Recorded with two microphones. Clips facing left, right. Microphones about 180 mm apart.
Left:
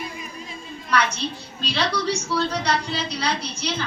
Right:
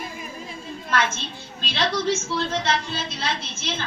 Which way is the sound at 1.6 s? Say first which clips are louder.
Even; 20° right (ahead or behind).